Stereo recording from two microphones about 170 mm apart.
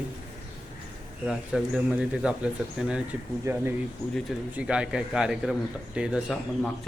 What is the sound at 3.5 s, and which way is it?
Speech, 20° right (ahead or behind).